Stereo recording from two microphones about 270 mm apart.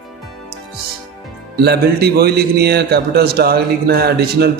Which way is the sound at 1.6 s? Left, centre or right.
Right.